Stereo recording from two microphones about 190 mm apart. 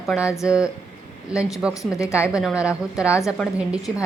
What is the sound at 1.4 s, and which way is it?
Speech, 5° right (ahead or behind).